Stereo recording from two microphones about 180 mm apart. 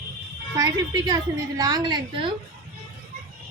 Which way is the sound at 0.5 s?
20° right (ahead or behind).